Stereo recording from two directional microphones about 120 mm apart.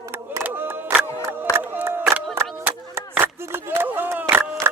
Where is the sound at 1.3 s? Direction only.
15° right (ahead or behind).